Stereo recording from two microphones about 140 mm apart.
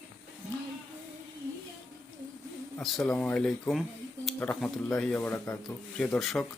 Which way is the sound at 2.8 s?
Centre (ahead or behind).